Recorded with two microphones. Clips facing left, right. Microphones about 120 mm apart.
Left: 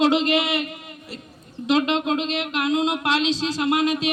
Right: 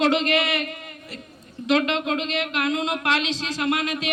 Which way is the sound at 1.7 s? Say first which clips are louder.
Left 1 dB; 25° left (ahead or behind).